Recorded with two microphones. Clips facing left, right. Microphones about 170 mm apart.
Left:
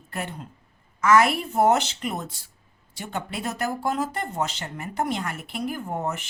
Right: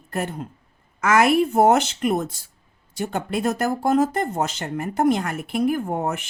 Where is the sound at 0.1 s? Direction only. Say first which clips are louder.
Right 6 dB; 45° right (ahead or behind).